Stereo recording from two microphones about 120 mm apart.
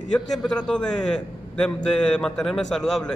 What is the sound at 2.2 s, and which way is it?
Speech, 5° left (ahead or behind).